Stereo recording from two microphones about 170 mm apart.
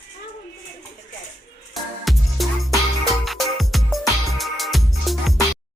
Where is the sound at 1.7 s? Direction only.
Centre (ahead or behind).